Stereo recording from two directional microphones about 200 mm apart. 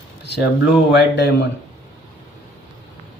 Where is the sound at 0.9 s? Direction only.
60° left (ahead or behind).